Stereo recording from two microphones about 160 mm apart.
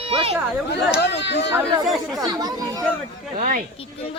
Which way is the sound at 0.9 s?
90° left.